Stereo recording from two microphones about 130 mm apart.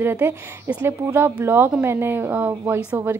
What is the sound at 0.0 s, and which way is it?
A woman's voice, 15° right (ahead or behind).